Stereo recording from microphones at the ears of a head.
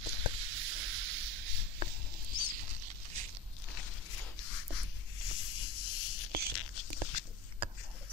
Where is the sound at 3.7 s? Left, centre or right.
Left.